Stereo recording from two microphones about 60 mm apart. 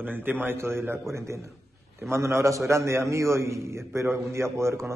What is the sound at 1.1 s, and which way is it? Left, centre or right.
A man's voice, right.